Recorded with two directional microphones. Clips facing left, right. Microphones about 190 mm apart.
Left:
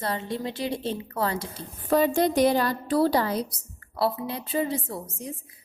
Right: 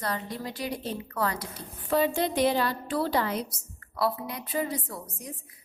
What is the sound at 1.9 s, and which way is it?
A woman's voice, 45° left (ahead or behind).